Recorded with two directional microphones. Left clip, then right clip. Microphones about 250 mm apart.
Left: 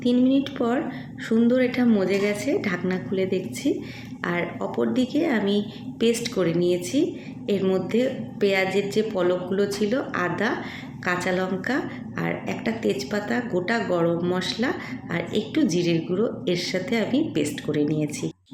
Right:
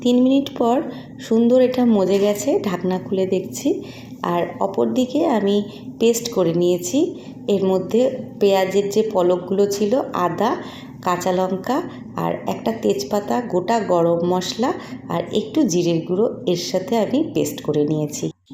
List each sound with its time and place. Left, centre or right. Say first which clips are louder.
0.0 s a woman's voice: right 5 dB; centre